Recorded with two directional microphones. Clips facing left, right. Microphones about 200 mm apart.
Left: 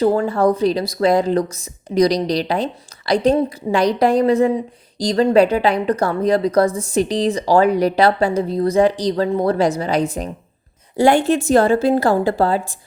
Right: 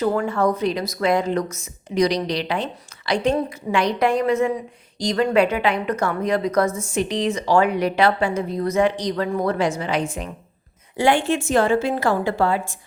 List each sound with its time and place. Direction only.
0.0 s a woman's voice: 30° left (ahead or behind)